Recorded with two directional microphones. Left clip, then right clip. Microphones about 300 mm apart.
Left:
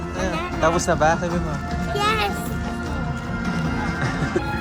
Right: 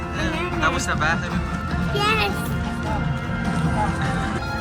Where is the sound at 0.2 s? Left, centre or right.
Centre.